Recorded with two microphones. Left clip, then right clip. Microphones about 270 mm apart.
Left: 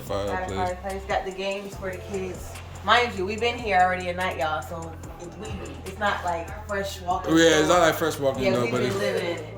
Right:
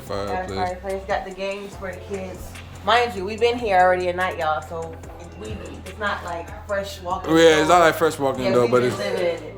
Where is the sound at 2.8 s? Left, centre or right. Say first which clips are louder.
Right 2 dB; right.